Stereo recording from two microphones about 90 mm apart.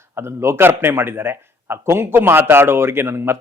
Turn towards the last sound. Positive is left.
turn(degrees=-25)  # may be behind; listen again after turning